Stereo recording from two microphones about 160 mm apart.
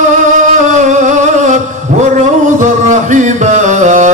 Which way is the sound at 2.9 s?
50° right (ahead or behind).